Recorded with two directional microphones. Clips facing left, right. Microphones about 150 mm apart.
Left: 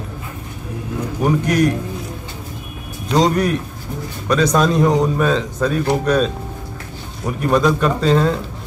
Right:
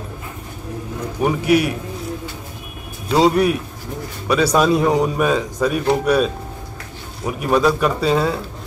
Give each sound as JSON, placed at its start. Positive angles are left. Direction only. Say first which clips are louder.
{"t": 1.2, "sound": "speech", "louder": "even", "side_deg": -10}
{"t": 3.1, "sound": "speech", "louder": "right 1 dB", "side_deg": -10}